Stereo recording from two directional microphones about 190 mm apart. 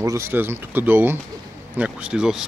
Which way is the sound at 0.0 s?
15° right (ahead or behind).